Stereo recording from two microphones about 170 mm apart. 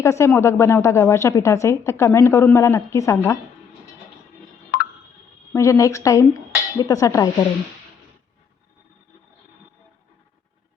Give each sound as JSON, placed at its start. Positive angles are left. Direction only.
{"t": 0.0, "sound": "a woman's voice", "side_deg": 15}
{"t": 4.7, "sound": "a sound", "side_deg": 65}
{"t": 5.5, "sound": "a woman's voice", "side_deg": 20}